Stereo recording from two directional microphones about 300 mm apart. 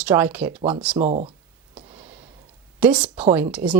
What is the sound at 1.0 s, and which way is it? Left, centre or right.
Speech, right.